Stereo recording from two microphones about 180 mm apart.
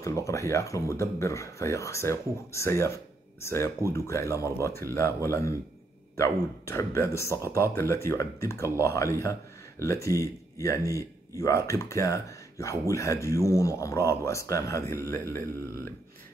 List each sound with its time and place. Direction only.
0.0 s speech: 15° left (ahead or behind)